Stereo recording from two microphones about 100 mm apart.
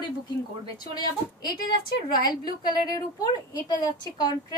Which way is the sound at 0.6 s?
40° left (ahead or behind).